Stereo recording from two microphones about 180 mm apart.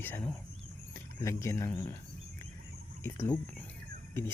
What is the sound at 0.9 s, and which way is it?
Speech, 15° left (ahead or behind).